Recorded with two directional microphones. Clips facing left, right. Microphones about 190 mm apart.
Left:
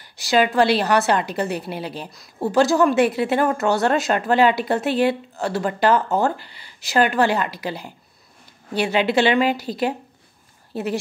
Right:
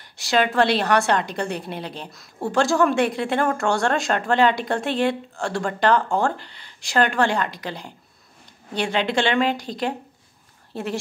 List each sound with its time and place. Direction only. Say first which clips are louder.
0.0 s a woman's voice: left 2 dB; centre (ahead or behind)